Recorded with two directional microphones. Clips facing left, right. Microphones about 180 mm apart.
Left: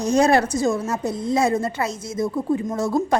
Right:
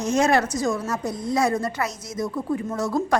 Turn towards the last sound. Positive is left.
turn(degrees=25)  # may be behind; listen again after turning